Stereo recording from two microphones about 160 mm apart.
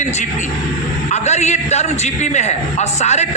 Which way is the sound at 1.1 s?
45° left (ahead or behind).